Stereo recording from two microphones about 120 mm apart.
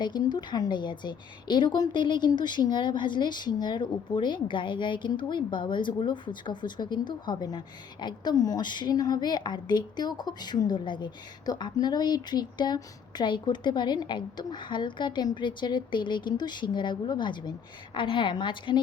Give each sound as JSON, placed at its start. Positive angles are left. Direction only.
{"t": 0.0, "sound": "a woman's voice", "side_deg": 35}